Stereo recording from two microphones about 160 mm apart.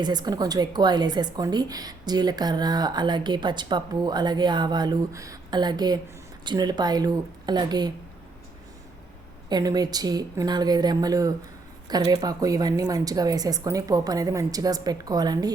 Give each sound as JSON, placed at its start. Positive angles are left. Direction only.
{"t": 0.0, "sound": "a woman's voice", "side_deg": -25}
{"t": 9.5, "sound": "a woman's voice", "side_deg": -25}